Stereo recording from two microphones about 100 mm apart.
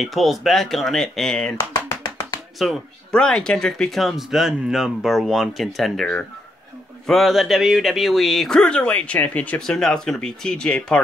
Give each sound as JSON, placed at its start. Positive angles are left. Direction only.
{"t": 0.0, "sound": "speech", "side_deg": 0}
{"t": 1.9, "sound": "clapping", "side_deg": 25}
{"t": 2.6, "sound": "speech", "side_deg": 5}